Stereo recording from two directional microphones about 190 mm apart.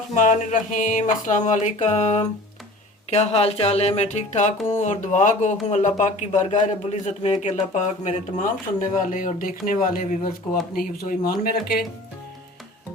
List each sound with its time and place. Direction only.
0.1 s speech: 40° left (ahead or behind)